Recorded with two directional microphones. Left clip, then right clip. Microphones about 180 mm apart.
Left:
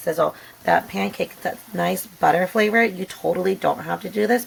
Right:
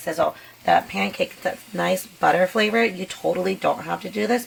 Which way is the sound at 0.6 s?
30° left (ahead or behind).